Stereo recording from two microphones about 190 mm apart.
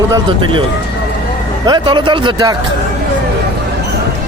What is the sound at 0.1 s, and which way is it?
Speech, 25° right (ahead or behind).